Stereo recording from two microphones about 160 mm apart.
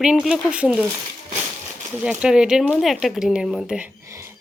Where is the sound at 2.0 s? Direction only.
5° right (ahead or behind).